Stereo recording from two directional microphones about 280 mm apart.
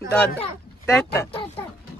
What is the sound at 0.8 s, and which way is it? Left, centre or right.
Speech, centre.